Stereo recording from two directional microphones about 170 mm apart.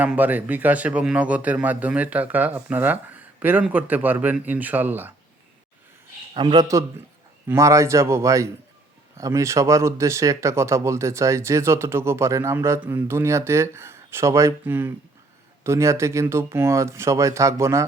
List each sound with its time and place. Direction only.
0.0 s speech: 10° right (ahead or behind)
6.3 s a man's voice: 25° right (ahead or behind)